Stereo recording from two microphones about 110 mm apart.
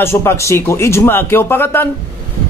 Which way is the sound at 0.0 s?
25° left (ahead or behind).